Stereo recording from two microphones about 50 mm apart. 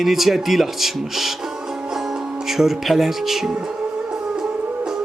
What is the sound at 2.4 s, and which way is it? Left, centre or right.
Speech, centre.